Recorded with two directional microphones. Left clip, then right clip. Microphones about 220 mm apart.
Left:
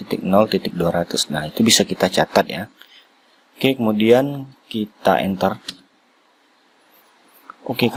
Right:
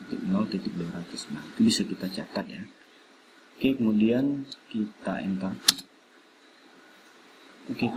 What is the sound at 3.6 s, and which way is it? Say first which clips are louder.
Speech: left 8 dB; 50° left (ahead or behind).